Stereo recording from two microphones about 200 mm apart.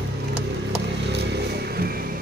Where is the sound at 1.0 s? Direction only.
55° right (ahead or behind).